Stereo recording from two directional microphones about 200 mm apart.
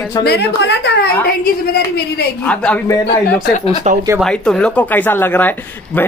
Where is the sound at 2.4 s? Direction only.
5° left (ahead or behind).